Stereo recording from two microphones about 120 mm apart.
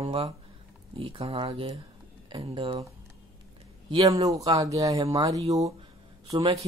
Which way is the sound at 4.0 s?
30° right (ahead or behind).